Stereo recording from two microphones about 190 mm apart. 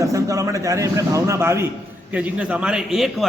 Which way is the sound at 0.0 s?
15° right (ahead or behind).